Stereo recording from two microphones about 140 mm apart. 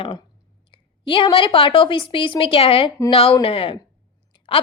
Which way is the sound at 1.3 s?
35° left (ahead or behind).